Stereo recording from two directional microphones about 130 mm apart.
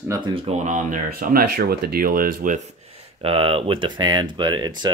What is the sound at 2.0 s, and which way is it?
Speech, 90° right.